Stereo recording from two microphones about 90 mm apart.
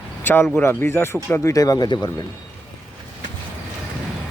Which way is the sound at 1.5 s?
45° left (ahead or behind).